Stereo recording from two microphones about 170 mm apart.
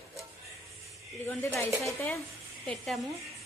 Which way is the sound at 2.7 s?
Centre (ahead or behind).